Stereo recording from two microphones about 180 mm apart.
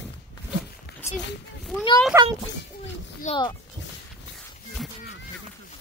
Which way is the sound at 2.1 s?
15° right (ahead or behind).